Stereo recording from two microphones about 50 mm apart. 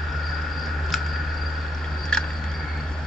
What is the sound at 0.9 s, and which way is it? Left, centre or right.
Cricket, centre.